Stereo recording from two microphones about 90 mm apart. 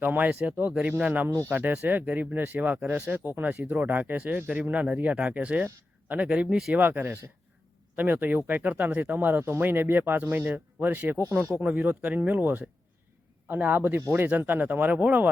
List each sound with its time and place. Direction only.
0.0 s speech: 20° right (ahead or behind)
1.3 s speech: 35° right (ahead or behind)
1.5 s speech: 20° right (ahead or behind)
6.7 s speech: 20° right (ahead or behind)
11.6 s speech: 15° right (ahead or behind)